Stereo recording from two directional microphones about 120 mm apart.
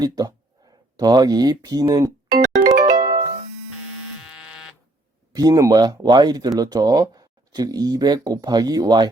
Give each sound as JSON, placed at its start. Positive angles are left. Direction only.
{"t": 0.0, "sound": "speech", "side_deg": -30}
{"t": 0.9, "sound": "music", "side_deg": -35}
{"t": 4.3, "sound": "buzzer", "side_deg": -5}
{"t": 5.3, "sound": "speech", "side_deg": -30}